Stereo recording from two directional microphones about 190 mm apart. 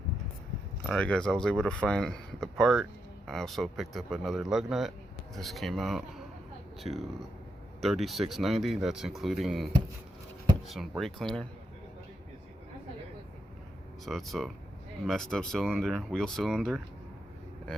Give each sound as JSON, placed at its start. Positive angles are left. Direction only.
{"t": 0.9, "sound": "speech", "side_deg": 5}
{"t": 10.7, "sound": "speech", "side_deg": 0}
{"t": 14.0, "sound": "speech", "side_deg": 0}